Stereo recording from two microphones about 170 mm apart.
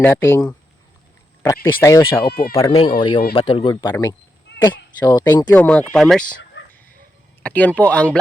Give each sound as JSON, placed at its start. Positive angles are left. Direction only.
{"t": 0.0, "sound": "speech", "side_deg": 15}
{"t": 2.2, "sound": "speech", "side_deg": 65}
{"t": 2.6, "sound": "speech", "side_deg": 25}
{"t": 7.4, "sound": "speech", "side_deg": 10}